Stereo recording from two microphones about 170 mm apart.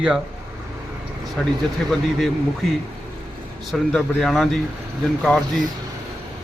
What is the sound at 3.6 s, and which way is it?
A man's voice, centre (ahead or behind).